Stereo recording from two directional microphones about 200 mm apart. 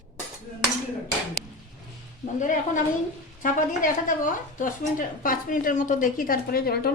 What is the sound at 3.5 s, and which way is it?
A woman's voice, 40° left (ahead or behind).